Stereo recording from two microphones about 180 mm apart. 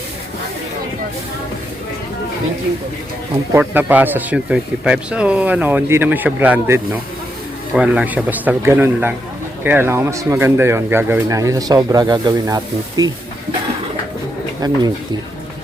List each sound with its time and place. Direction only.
3.5 s speech: 10° right (ahead or behind)
14.6 s speech: 20° right (ahead or behind)